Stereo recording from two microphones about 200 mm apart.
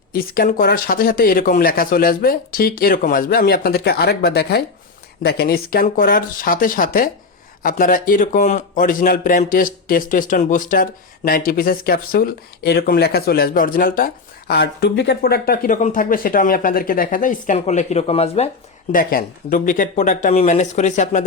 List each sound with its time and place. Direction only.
0.1 s a man's voice: 45° left (ahead or behind)